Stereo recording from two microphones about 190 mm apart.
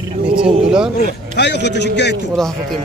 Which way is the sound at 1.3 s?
65° left (ahead or behind).